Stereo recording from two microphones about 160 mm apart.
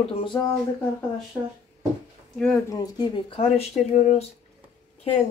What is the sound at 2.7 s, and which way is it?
Speech, 25° left (ahead or behind).